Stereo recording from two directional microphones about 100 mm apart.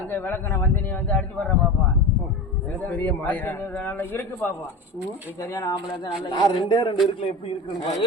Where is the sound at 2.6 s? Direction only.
15° left (ahead or behind).